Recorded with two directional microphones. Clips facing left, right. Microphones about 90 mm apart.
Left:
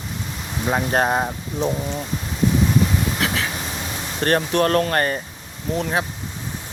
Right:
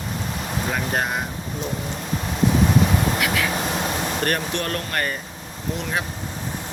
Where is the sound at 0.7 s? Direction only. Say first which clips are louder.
Left 7 dB; 35° left (ahead or behind).